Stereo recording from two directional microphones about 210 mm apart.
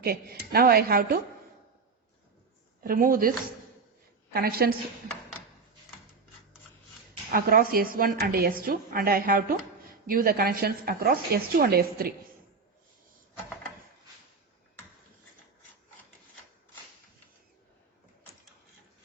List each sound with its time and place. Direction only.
0.0 s a woman's voice: 45° right (ahead or behind)
2.8 s a woman's voice: 40° right (ahead or behind)
7.3 s a woman's voice: 45° right (ahead or behind)